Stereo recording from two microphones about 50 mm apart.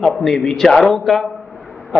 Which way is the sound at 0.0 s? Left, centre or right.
Centre.